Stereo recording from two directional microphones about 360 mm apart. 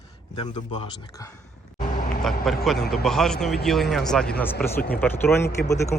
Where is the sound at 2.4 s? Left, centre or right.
Centre.